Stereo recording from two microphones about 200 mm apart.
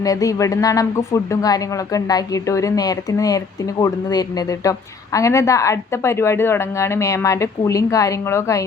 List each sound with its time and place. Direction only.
0.0 s speech: 15° left (ahead or behind)